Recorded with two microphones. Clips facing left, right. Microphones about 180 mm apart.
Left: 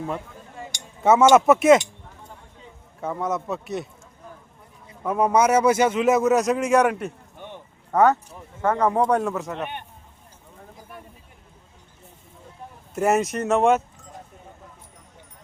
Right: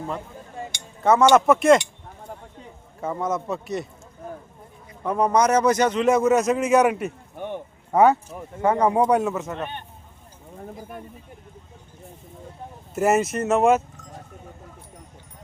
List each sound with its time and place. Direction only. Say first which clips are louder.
1.0 s a man's voice: left 1 dB; 5° left (ahead or behind)
3.0 s a man's voice: right 1 dB; centre (ahead or behind)
5.0 s a man's voice: even; 5° left (ahead or behind)
7.3 s a sound: right 8 dB; 50° right (ahead or behind)
7.9 s speech: right 1 dB; 15° right (ahead or behind)
9.6 s speech: even; 15° left (ahead or behind)
12.9 s a man's voice: right 1 dB; 5° right (ahead or behind)